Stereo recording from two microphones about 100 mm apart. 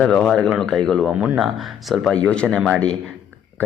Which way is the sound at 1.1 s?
15° right (ahead or behind).